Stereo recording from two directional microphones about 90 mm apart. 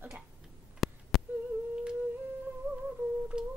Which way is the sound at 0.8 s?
Centre (ahead or behind).